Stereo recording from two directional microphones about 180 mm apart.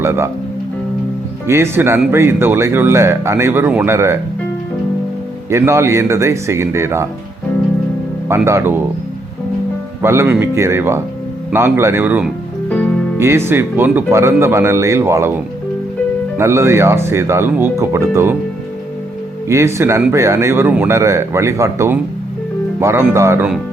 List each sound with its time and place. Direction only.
0.0 s speech: 15° right (ahead or behind)
1.5 s a man's voice: 15° right (ahead or behind)
5.5 s a man's voice: 15° right (ahead or behind)
8.3 s a man's voice: 15° right (ahead or behind)
10.0 s a man's voice: 15° right (ahead or behind)
16.4 s a man's voice: 15° right (ahead or behind)
19.5 s a man's voice: 15° right (ahead or behind)